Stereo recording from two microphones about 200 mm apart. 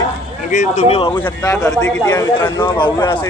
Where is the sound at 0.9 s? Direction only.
25° left (ahead or behind).